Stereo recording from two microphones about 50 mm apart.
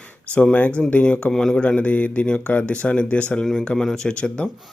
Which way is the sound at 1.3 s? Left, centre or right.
Centre.